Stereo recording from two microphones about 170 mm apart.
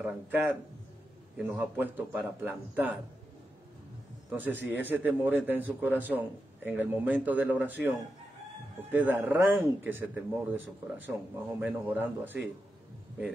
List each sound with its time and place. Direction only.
0.0 s a man's voice: 5° right (ahead or behind)
4.3 s a man's voice: 10° right (ahead or behind)
8.9 s a man's voice: 10° right (ahead or behind)